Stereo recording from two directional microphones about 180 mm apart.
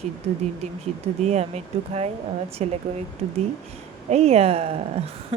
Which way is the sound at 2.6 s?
35° right (ahead or behind).